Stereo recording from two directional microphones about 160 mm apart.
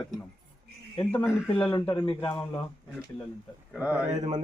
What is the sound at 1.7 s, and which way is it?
Speech, 30° left (ahead or behind).